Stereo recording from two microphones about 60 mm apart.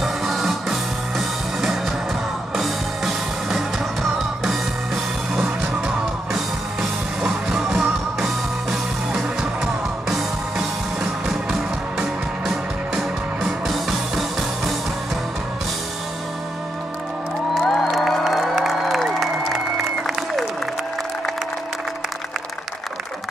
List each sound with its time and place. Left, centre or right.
0.0 s music: centre
12.4 s music: centre
17.6 s music: centre